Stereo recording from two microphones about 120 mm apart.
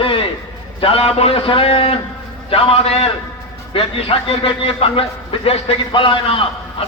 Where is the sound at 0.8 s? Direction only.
50° left (ahead or behind).